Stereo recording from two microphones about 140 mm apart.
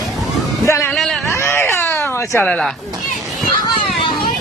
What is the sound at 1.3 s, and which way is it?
Baby cry, 20° left (ahead or behind).